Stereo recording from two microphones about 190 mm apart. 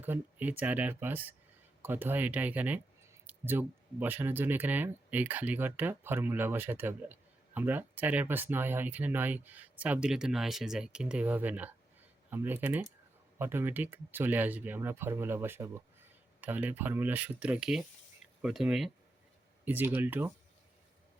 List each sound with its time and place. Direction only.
0.0 s speech: 10° right (ahead or behind)